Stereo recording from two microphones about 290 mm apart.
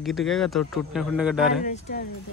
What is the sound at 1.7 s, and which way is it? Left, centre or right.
Speech, left.